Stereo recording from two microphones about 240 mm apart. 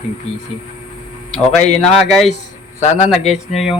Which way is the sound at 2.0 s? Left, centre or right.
Centre.